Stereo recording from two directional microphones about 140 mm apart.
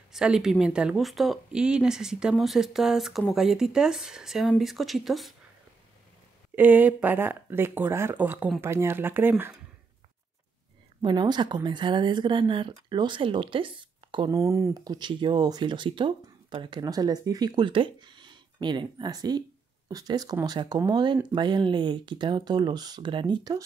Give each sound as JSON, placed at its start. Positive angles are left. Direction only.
{"t": 0.1, "sound": "speech", "side_deg": -5}
{"t": 6.5, "sound": "speech", "side_deg": -10}
{"t": 11.0, "sound": "speech", "side_deg": -30}
{"t": 14.3, "sound": "speech", "side_deg": -20}